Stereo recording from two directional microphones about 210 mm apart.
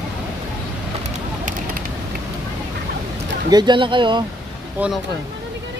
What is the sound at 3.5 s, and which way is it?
Speech, 20° right (ahead or behind).